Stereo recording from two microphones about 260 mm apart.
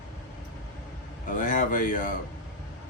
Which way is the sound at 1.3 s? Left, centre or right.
Left.